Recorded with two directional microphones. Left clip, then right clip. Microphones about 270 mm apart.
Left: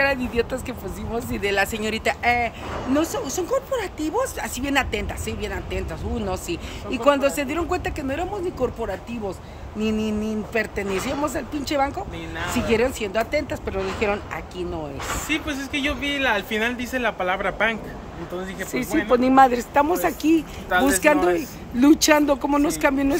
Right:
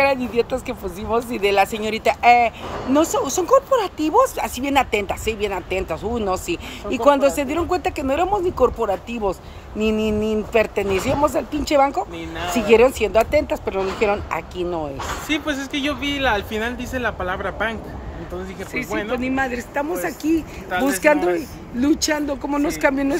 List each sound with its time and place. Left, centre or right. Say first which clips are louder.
0.0 s speech: right 3 dB; centre
15.2 s speech: right 3 dB; centre
15.5 s speech: right 1 dB; centre
19.1 s speech: left 10 dB; centre
19.7 s speech: left 4 dB; centre